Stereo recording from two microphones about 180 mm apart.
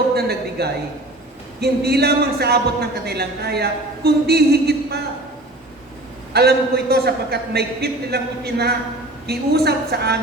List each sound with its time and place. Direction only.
0.1 s a sound: 60° right (ahead or behind)
1.6 s a man's voice: 60° right (ahead or behind)
6.3 s a man's voice: 60° right (ahead or behind)